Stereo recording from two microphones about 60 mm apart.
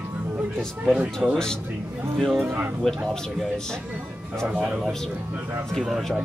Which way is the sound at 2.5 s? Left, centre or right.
Right.